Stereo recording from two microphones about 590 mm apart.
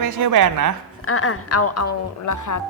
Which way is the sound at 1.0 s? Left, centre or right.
Left.